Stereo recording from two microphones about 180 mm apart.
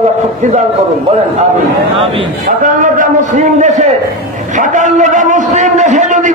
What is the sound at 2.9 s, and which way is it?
A man's voice, 45° right (ahead or behind).